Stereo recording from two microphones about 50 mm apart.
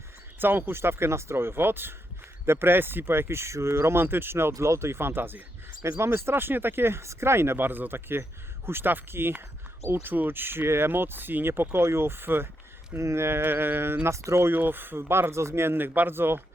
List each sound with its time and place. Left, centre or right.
0.3 s speech: right
0.8 s speech: right
13.0 s speech: right
14.1 s speech: right
14.5 s speech: right